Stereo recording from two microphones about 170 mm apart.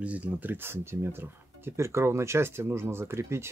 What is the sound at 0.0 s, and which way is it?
Speech, 10° right (ahead or behind).